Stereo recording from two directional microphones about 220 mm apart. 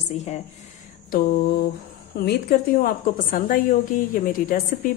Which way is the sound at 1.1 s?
45° left (ahead or behind).